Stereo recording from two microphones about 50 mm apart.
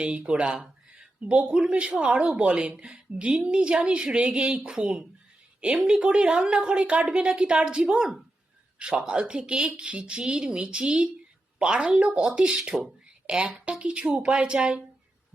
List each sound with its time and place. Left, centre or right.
0.0 s a woman's voice: right
13.2 s a woman's voice: right